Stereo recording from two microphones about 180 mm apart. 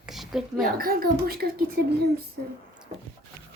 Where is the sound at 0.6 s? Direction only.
55° right (ahead or behind).